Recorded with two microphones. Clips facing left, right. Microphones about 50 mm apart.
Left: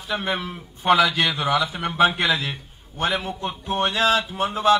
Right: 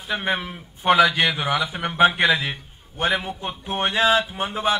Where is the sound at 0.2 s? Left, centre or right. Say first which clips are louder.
Right 1 dB; right.